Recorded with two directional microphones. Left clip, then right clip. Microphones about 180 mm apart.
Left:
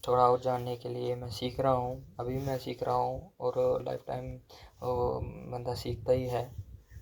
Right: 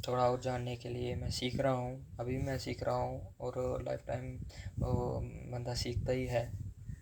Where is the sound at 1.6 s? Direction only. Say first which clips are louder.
Left 7 dB; 35° left (ahead or behind).